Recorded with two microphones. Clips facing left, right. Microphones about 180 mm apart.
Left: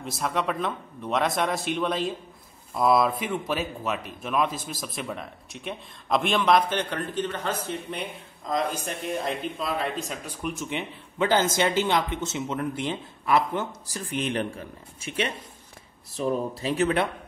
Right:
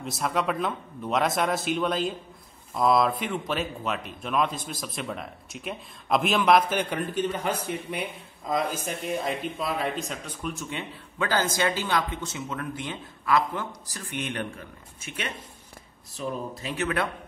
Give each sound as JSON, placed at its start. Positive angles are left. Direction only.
{"t": 0.0, "sound": "speech", "side_deg": 0}
{"t": 10.4, "sound": "speech", "side_deg": 15}